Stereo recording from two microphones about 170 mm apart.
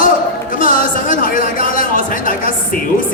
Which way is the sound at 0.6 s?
55° left (ahead or behind).